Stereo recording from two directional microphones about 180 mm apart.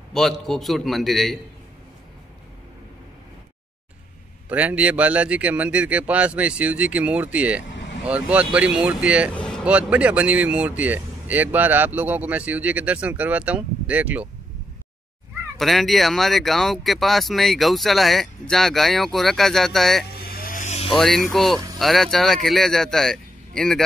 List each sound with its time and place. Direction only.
0.1 s speech: centre (ahead or behind)
4.5 s speech: 5° right (ahead or behind)
9.3 s vehicle: 5° left (ahead or behind)
9.7 s speech: 5° right (ahead or behind)
15.5 s speech: centre (ahead or behind)
20.2 s vehicle: 55° left (ahead or behind); by 20.9 s 40° left (ahead or behind)
20.9 s speech: centre (ahead or behind)